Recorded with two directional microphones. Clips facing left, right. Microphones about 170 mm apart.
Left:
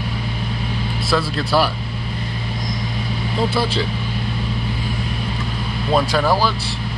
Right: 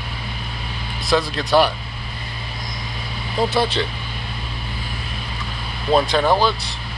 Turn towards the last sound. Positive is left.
turn(degrees=5)  # may be behind; listen again after turning